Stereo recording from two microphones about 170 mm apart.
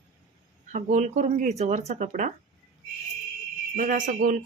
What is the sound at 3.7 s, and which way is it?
Speech, 55° right (ahead or behind).